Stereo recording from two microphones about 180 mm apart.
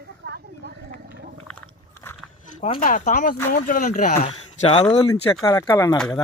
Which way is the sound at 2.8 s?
45° left (ahead or behind).